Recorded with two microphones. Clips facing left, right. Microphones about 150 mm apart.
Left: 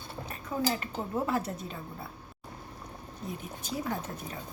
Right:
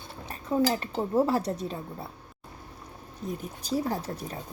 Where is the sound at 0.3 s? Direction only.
30° right (ahead or behind).